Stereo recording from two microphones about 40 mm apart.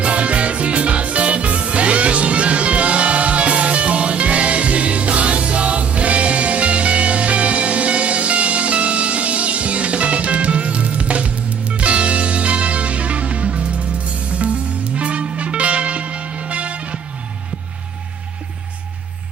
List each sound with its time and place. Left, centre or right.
0.0 s music: right